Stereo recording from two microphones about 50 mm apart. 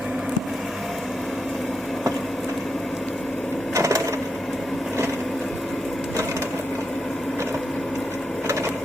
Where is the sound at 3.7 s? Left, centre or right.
Right.